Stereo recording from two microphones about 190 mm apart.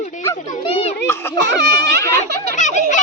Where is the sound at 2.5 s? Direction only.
40° left (ahead or behind).